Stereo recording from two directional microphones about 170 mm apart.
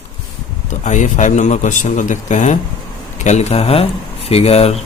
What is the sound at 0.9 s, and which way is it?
Speech, 45° left (ahead or behind).